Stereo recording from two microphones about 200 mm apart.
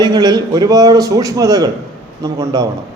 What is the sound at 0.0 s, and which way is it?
A man's voice, 20° right (ahead or behind).